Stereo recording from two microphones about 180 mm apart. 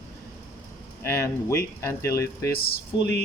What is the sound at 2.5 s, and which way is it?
Speech, 60° left (ahead or behind).